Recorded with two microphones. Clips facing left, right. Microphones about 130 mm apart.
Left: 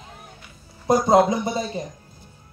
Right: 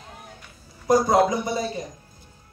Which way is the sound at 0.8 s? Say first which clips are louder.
Left 2 dB; 25° left (ahead or behind).